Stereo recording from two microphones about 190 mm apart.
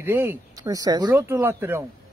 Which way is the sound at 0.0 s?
10° right (ahead or behind).